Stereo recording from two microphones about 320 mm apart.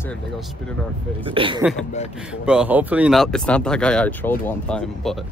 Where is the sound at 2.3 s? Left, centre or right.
Centre.